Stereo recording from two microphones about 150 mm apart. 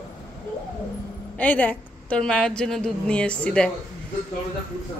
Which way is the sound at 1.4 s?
10° left (ahead or behind).